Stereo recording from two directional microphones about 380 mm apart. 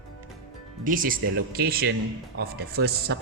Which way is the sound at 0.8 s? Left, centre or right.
Right.